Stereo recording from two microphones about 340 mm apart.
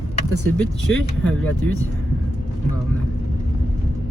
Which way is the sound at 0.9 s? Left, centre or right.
Left.